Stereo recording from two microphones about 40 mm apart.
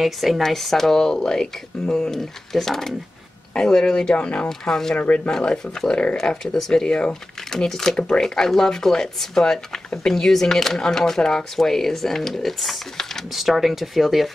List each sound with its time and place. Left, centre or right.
0.0 s speech: centre
4.1 s speech: left
4.5 s speech: centre
4.9 s speech: left
5.3 s speech: centre
7.5 s speech: centre
13.3 s speech: centre